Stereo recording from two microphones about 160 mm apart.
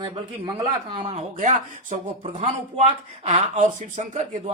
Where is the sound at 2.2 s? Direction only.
35° right (ahead or behind).